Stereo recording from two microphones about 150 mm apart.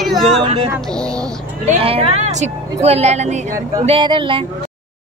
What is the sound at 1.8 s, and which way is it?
A woman's voice, 40° right (ahead or behind).